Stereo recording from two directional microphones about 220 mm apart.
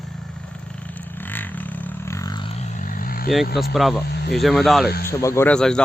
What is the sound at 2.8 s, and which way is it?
Vehicle, 40° left (ahead or behind).